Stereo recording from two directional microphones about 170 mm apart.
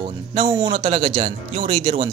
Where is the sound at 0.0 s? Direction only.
35° right (ahead or behind).